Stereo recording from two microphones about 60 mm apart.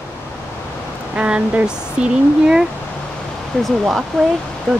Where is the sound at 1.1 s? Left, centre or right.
Right.